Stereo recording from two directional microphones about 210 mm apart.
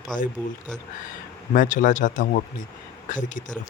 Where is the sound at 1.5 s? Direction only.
40° left (ahead or behind).